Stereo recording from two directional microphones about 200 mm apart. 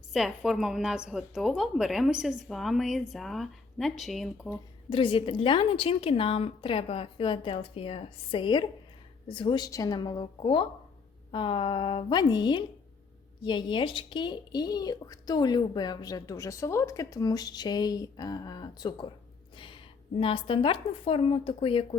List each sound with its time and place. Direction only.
0.1 s a woman's voice: centre (ahead or behind)
4.9 s speech: 25° left (ahead or behind)